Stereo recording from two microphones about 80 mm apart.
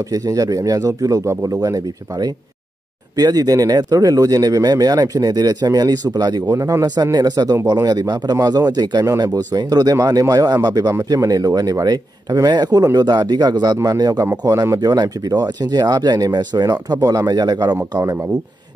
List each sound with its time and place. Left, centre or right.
0.1 s speech: right
14.4 s speech: right
18.0 s speech: right